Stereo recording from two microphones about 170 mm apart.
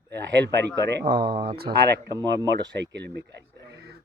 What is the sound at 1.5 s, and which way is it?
Speech, 65° right (ahead or behind).